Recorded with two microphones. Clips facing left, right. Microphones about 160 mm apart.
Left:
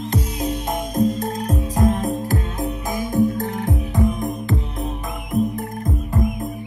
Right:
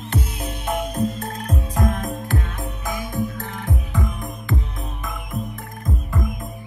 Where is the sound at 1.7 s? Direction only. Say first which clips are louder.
Left 5 dB; 35° left (ahead or behind).